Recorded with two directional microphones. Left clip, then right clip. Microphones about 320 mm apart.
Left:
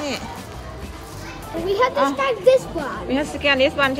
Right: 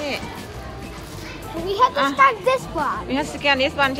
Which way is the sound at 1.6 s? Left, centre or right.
Centre.